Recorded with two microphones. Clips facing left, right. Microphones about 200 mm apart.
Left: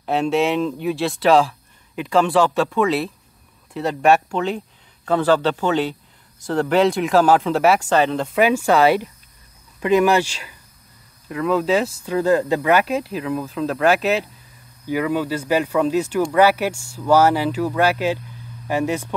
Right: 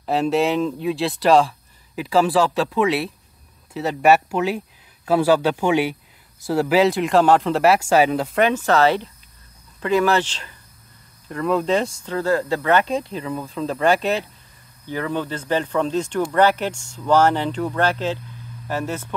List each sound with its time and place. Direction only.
0.0 s speech: centre (ahead or behind)
8.4 s speech: 10° left (ahead or behind)